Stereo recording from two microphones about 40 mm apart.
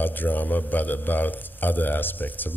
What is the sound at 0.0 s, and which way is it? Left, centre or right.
A man's voice, left.